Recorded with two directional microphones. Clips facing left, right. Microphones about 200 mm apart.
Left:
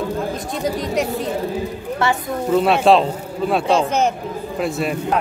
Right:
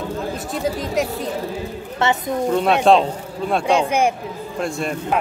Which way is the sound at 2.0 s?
20° right (ahead or behind).